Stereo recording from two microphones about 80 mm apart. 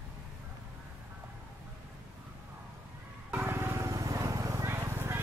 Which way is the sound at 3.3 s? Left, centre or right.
Right.